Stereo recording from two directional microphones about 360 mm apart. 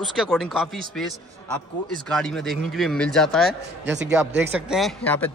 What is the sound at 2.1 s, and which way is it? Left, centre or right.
Speech, centre.